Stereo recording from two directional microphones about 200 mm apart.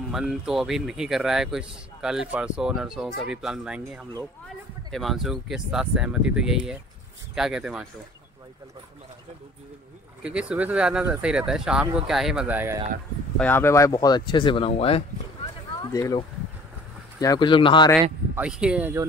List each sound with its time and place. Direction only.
0.1 s a man's voice: centre (ahead or behind)
10.2 s a man's voice: 5° right (ahead or behind)
13.4 s speech: 10° left (ahead or behind); by 15.0 s 30° left (ahead or behind)
15.9 s speech: 15° left (ahead or behind)
18.3 s speech: 5° right (ahead or behind)